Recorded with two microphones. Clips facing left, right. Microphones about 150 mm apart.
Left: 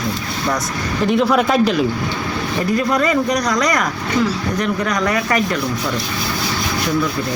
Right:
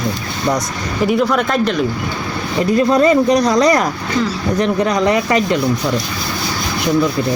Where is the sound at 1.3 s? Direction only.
5° left (ahead or behind).